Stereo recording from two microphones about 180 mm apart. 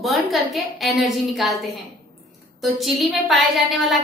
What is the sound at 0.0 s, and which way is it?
A woman's voice, centre (ahead or behind).